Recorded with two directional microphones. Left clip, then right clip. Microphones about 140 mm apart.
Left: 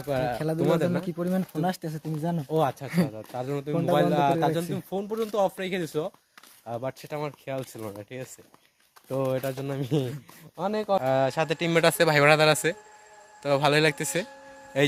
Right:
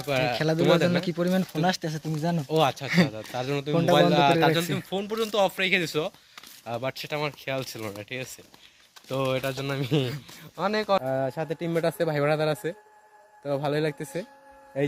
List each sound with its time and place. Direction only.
0.0 s speech: 45° left (ahead or behind)
0.3 s speech: centre (ahead or behind)
2.5 s speech: 35° left (ahead or behind)
3.3 s speech: 15° left (ahead or behind)
4.9 s speech: 50° left (ahead or behind)
6.7 s speech: 25° left (ahead or behind)
9.0 s speech: 50° left (ahead or behind)
9.6 s speech: 35° left (ahead or behind)
11.0 s speech: 15° right (ahead or behind)
11.8 s speech: 5° right (ahead or behind)